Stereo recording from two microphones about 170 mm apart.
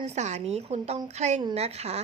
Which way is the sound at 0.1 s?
40° right (ahead or behind).